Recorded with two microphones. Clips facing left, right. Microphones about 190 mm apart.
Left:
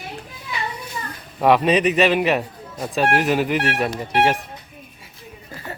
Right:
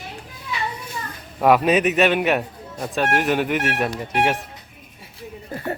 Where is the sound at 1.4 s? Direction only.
Centre (ahead or behind).